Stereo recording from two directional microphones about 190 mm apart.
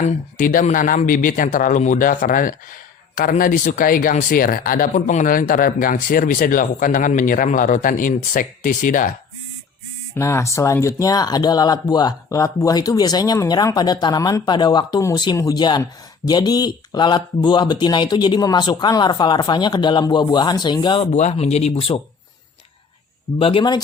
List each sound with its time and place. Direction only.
0.0 s speech: 45° left (ahead or behind)
10.2 s speech: 15° left (ahead or behind)
21.1 s speech: 40° left (ahead or behind)
23.4 s speech: 30° left (ahead or behind)